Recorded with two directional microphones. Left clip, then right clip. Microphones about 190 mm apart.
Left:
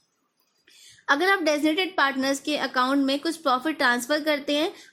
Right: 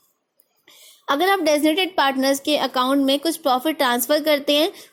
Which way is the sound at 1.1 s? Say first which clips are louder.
Right 3 dB; 15° right (ahead or behind).